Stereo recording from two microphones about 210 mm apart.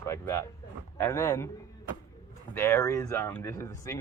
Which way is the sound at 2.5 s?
15° left (ahead or behind).